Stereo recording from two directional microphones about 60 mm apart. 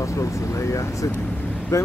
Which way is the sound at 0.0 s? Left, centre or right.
Left.